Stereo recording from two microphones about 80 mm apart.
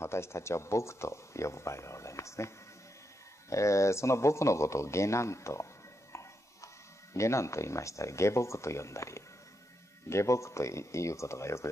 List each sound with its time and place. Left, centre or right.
0.0 s speech: left
6.1 s a sound: left
7.2 s speech: left